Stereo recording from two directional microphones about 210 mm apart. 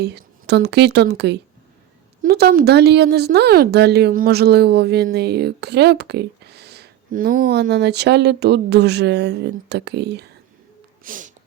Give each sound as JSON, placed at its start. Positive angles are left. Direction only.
{"t": 0.0, "sound": "speech", "side_deg": -50}
{"t": 11.0, "sound": "snort", "side_deg": -40}